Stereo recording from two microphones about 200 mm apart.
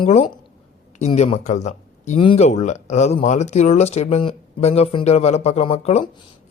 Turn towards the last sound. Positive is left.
turn(degrees=30)  # may be behind; listen again after turning